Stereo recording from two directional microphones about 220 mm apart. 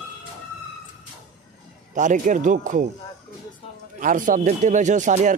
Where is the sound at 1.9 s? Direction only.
35° right (ahead or behind).